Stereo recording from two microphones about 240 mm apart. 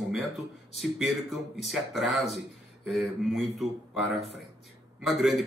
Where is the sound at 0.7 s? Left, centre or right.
Centre.